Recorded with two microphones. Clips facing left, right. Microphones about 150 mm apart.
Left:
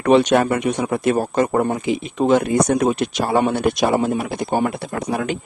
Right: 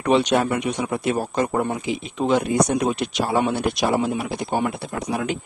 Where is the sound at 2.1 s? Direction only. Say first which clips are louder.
Left 4 dB; 45° left (ahead or behind).